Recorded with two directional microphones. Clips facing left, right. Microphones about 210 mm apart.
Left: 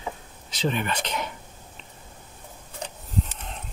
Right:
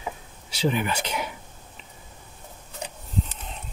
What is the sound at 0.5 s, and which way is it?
Speech, 10° right (ahead or behind).